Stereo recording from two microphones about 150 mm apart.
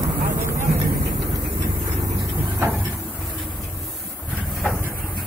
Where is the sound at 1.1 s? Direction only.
30° right (ahead or behind); by 2.8 s 15° right (ahead or behind).